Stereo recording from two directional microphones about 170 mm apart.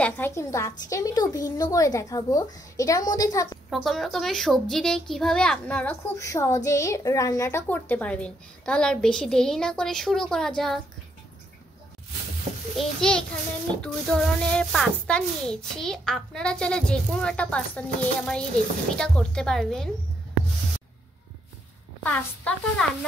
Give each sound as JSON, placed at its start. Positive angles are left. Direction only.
{"t": 0.0, "sound": "a woman's voice", "side_deg": 15}
{"t": 3.7, "sound": "a child's voice", "side_deg": 0}
{"t": 6.1, "sound": "a child's voice", "side_deg": 20}
{"t": 12.7, "sound": "a child's voice", "side_deg": 5}
{"t": 22.0, "sound": "speech", "side_deg": 10}